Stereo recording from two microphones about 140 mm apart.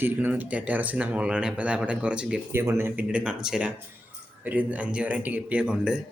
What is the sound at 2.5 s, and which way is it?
Speech, 15° right (ahead or behind).